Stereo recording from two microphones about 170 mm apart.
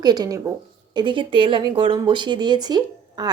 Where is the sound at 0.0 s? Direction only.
25° right (ahead or behind).